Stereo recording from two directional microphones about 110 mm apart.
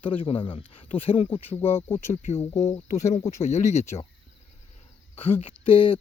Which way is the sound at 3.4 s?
90° left.